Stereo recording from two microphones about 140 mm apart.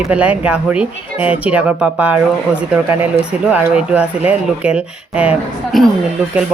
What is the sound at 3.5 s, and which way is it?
A woman's voice, 10° right (ahead or behind).